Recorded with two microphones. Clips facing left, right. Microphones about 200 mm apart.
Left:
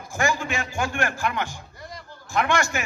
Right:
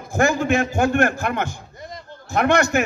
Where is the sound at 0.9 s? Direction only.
45° right (ahead or behind).